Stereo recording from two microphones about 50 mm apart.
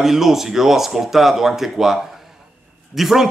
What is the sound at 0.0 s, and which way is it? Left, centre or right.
A man's voice, centre.